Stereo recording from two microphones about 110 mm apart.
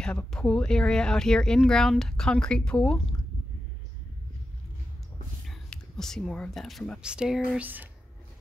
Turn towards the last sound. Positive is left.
turn(degrees=-15)  # may be behind; listen again after turning